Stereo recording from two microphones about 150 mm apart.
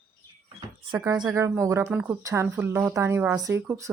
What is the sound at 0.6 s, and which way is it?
A woman's voice, 25° right (ahead or behind).